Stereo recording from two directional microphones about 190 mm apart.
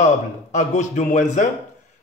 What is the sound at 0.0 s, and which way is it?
A man's voice, 40° left (ahead or behind).